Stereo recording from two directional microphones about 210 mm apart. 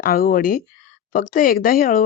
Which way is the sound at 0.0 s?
45° left (ahead or behind).